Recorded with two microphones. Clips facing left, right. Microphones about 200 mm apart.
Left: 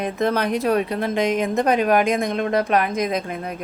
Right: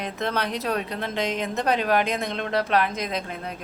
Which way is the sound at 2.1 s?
10° left (ahead or behind).